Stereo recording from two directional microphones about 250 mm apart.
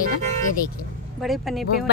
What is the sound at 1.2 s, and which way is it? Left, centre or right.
Speech, centre.